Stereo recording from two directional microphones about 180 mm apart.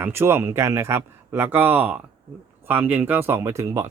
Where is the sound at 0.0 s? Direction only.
15° right (ahead or behind).